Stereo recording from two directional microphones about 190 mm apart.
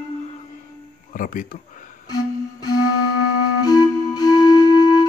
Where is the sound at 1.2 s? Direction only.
45° left (ahead or behind).